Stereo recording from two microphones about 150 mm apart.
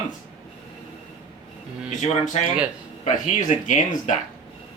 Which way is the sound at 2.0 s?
55° left (ahead or behind).